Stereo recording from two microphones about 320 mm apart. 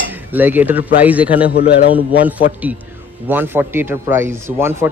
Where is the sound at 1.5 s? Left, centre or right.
Left.